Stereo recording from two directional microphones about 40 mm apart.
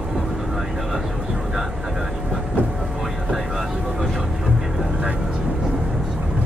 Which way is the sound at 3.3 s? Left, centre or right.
Centre.